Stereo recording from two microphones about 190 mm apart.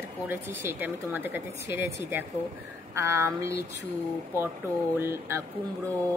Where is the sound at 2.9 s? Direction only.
15° right (ahead or behind).